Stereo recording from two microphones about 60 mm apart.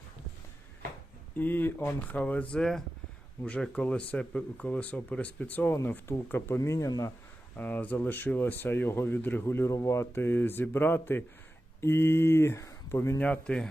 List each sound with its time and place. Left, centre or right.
1.4 s speech: left
2.1 s speech: left
2.6 s speech: centre
3.4 s speech: left
6.7 s speech: left
7.5 s speech: left
9.4 s speech: left
10.2 s speech: left
13.1 s speech: left